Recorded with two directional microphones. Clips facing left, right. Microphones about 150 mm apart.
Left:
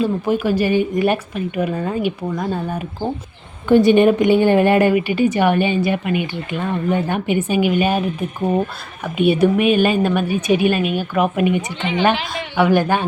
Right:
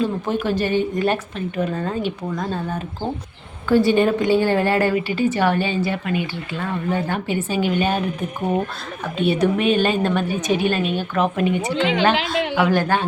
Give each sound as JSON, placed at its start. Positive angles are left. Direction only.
{"t": 0.0, "sound": "a woman's voice", "side_deg": 10}
{"t": 9.1, "sound": "a woman's voice", "side_deg": 10}
{"t": 11.7, "sound": "a woman's voice", "side_deg": -90}
{"t": 12.7, "sound": "a woman's voice", "side_deg": 15}